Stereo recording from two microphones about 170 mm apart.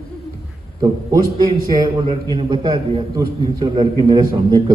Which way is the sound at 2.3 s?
30° right (ahead or behind).